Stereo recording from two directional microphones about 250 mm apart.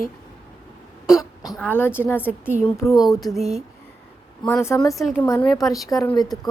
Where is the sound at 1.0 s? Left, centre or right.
Centre.